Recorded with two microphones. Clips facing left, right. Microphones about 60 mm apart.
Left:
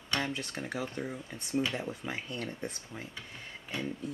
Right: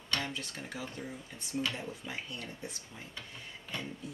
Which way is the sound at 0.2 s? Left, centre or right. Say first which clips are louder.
Left 4 dB; left.